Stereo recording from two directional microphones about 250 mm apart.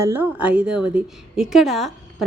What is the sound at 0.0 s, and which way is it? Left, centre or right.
A woman's voice, centre.